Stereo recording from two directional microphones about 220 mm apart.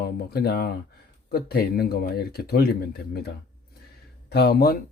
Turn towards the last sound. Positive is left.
turn(degrees=45)  # may be behind; listen again after turning